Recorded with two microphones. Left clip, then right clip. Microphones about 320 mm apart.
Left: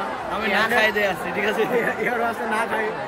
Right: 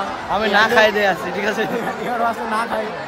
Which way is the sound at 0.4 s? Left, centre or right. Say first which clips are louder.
Right 6 dB; right.